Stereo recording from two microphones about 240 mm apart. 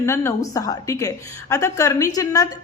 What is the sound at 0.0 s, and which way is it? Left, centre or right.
A woman's voice, centre.